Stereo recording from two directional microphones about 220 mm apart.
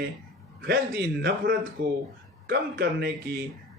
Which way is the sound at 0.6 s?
45° right (ahead or behind).